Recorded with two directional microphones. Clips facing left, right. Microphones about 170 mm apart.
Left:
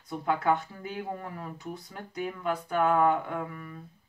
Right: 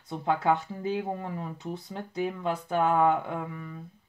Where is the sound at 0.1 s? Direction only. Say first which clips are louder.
Right 1 dB; 25° right (ahead or behind).